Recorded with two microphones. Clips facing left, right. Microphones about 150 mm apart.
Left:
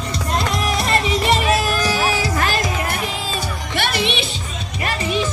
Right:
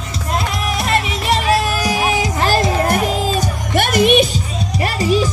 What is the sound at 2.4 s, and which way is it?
Music, 35° right (ahead or behind).